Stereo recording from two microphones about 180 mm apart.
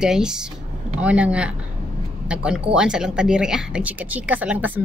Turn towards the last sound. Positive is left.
turn(degrees=-10)  # may be behind; listen again after turning